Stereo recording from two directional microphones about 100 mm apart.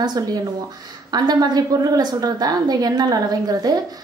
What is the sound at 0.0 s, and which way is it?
A woman's voice, 45° right (ahead or behind).